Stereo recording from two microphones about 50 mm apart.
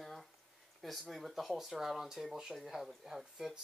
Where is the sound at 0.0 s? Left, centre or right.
Centre.